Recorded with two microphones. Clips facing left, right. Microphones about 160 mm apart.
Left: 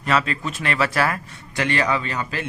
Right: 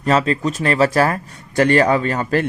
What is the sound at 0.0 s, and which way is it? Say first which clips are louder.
Speech: right 6 dB; 35° right (ahead or behind).